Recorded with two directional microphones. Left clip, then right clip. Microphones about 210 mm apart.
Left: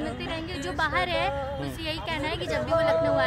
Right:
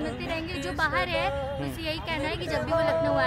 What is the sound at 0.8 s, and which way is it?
Speech, centre (ahead or behind).